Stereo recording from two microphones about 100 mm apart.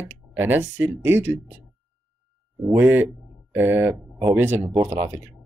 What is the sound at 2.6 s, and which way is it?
Speech, 20° right (ahead or behind).